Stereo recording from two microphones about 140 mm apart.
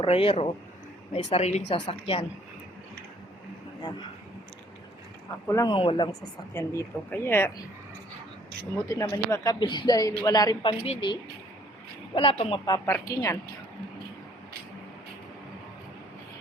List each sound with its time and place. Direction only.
0.0 s speech: 45° left (ahead or behind)
5.5 s speech: 20° left (ahead or behind)
5.7 s a woman's voice: 40° left (ahead or behind)
6.1 s speech: 20° left (ahead or behind)
8.7 s a woman's voice: 20° left (ahead or behind); by 12.6 s 40° left (ahead or behind)
12.8 s speech: 20° left (ahead or behind)